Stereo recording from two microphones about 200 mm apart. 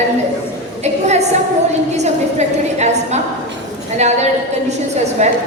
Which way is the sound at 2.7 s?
35° right (ahead or behind).